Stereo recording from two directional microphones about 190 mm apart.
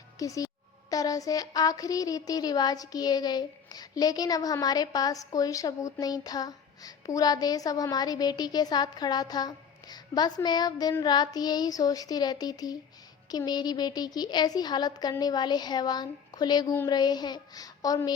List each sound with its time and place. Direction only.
0.2 s a child's voice: 15° left (ahead or behind)